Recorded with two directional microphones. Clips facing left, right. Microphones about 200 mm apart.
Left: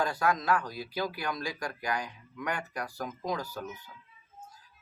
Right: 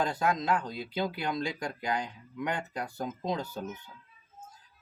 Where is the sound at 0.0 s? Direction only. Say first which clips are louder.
Even; 20° right (ahead or behind).